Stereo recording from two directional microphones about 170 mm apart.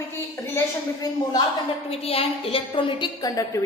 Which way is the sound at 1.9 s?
35° left (ahead or behind).